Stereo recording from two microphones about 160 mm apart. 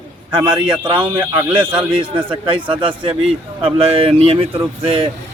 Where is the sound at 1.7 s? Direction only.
30° right (ahead or behind).